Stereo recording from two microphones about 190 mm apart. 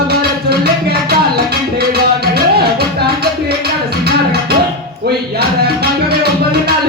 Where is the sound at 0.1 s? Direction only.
55° right (ahead or behind).